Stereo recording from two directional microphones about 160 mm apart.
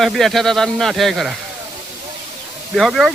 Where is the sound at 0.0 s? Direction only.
Centre (ahead or behind).